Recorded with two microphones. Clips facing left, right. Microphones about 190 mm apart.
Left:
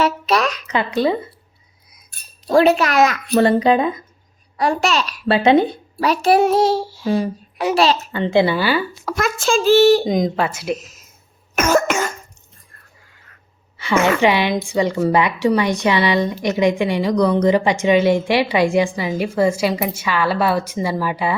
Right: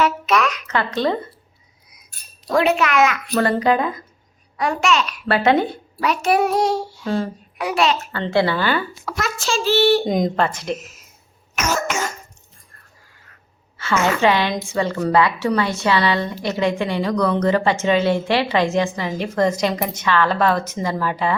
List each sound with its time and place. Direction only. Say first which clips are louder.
0.0 s a sound: left 1 dB; 35° left (ahead or behind)
0.7 s a woman's voice: left 4 dB; 15° left (ahead or behind)
2.5 s a child's voice: left 4 dB; 35° left (ahead or behind)
3.3 s speech: left 5 dB; 25° left (ahead or behind)
4.5 s a child's voice: left 1 dB; 35° left (ahead or behind)
5.3 s speech: left 3 dB; 20° left (ahead or behind)
6.0 s a child's voice: left 3 dB; 35° left (ahead or behind)
8.1 s a woman's voice: left 3 dB; 15° left (ahead or behind)
9.0 s a child's voice: left 8 dB; 50° left (ahead or behind)
10.1 s speech: left 1 dB; centre (ahead or behind)
10.8 s speech: right 1 dB; 35° left (ahead or behind)
11.5 s cough: left 6 dB; 55° left (ahead or behind)
14.0 s a woman's voice: left 1 dB; 15° left (ahead or behind)